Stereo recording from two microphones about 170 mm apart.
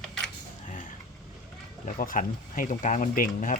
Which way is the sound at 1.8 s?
50° left (ahead or behind).